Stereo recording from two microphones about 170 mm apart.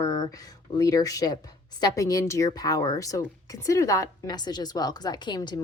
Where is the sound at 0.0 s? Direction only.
25° left (ahead or behind).